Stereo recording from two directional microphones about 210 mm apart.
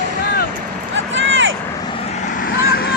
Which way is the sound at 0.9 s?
60° right (ahead or behind).